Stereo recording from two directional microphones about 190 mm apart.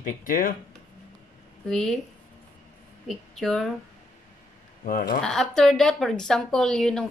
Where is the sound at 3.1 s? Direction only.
Centre (ahead or behind).